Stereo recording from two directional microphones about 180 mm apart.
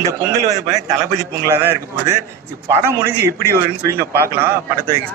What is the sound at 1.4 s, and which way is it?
A man's voice, 15° right (ahead or behind).